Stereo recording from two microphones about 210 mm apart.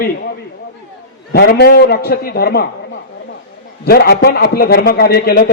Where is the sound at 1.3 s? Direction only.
50° left (ahead or behind).